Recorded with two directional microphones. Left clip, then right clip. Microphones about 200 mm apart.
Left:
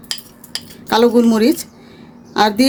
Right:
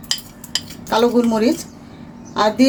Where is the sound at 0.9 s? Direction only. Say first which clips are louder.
Left 3 dB; 55° left (ahead or behind).